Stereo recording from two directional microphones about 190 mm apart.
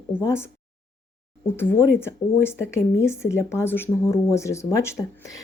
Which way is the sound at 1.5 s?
10° left (ahead or behind).